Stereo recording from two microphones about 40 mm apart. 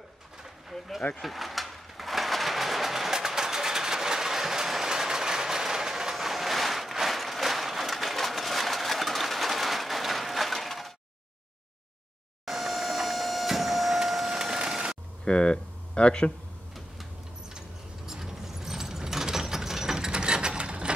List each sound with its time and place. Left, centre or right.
0.7 s a sound: centre
1.1 s vehicle: centre
12.4 s vehicle: centre
15.2 s speech: left
17.6 s ratchet: centre